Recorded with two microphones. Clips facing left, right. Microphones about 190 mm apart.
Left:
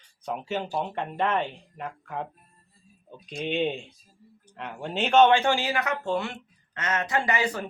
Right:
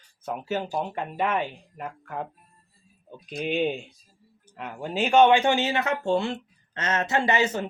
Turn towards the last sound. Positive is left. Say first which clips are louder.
# right 3 dB
turn(degrees=-25)  # may be behind; listen again after turning